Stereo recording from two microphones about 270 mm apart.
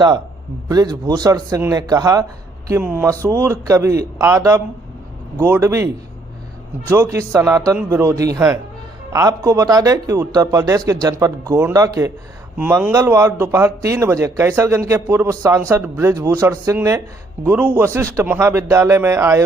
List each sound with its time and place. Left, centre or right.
0.7 s speech: centre